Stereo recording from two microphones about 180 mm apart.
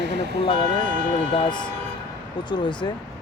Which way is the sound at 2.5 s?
25° left (ahead or behind).